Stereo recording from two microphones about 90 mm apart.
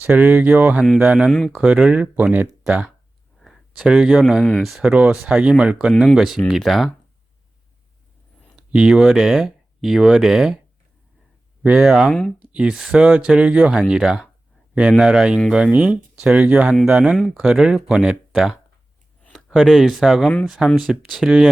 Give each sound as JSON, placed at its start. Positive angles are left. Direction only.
{"t": 0.0, "sound": "speech", "side_deg": -20}
{"t": 4.8, "sound": "speech", "side_deg": -15}
{"t": 8.5, "sound": "speech", "side_deg": -10}
{"t": 11.6, "sound": "speech", "side_deg": -10}
{"t": 18.3, "sound": "a sound", "side_deg": 0}
{"t": 19.3, "sound": "speech", "side_deg": 0}
{"t": 20.2, "sound": "speech", "side_deg": 5}